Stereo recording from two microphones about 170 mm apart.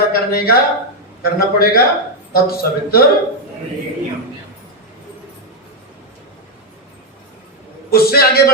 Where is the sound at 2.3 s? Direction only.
65° left (ahead or behind).